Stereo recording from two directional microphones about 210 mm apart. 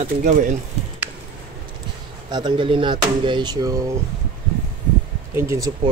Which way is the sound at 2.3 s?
20° right (ahead or behind).